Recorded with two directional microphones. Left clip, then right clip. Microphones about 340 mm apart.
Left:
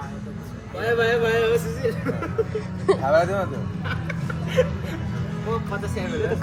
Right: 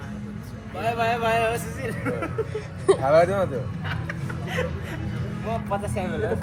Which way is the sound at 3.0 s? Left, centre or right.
Right.